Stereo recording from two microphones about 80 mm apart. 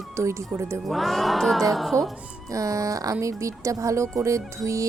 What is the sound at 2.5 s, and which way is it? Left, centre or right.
A woman's voice, right.